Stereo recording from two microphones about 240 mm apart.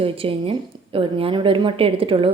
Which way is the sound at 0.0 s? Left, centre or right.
Right.